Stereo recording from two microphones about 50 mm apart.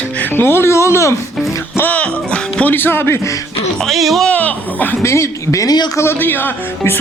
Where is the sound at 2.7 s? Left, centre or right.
Left.